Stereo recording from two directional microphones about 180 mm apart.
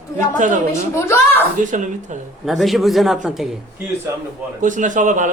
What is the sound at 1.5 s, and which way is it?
Speech, 45° right (ahead or behind).